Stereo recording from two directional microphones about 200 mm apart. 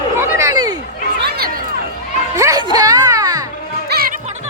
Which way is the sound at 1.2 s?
50° right (ahead or behind).